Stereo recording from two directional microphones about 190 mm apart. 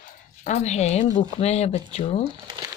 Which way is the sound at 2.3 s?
25° right (ahead or behind).